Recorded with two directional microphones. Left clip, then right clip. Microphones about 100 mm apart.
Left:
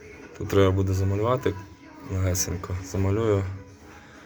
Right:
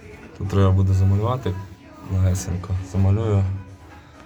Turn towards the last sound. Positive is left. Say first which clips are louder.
# left 1 dB
turn(degrees=20)  # may be behind; listen again after turning